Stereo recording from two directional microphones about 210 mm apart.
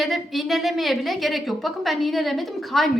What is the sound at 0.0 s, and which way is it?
A woman's voice, centre (ahead or behind).